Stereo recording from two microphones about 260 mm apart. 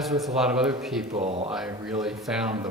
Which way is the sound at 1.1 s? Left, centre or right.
Right.